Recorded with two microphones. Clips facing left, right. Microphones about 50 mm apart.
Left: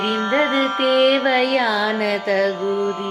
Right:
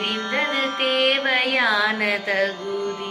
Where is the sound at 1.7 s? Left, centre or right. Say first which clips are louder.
Left 1 dB; right.